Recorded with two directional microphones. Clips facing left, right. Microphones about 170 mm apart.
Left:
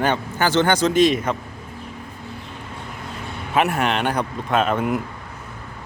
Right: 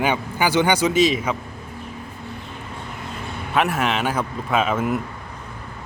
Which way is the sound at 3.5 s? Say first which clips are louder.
Left 1 dB; centre (ahead or behind).